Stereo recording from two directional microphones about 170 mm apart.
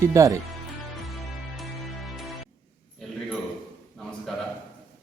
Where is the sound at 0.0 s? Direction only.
20° right (ahead or behind).